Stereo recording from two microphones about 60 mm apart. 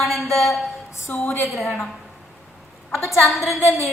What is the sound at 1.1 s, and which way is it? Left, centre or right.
Speech, left.